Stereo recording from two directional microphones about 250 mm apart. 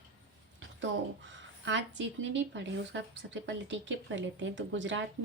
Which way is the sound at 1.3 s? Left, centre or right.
Right.